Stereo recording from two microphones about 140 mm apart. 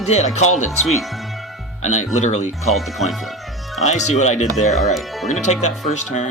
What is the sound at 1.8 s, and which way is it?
Speech, 55° left (ahead or behind).